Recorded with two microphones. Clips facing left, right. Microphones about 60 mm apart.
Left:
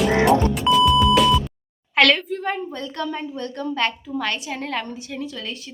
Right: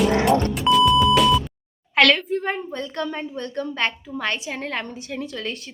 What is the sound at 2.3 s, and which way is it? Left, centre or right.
A woman's voice, right.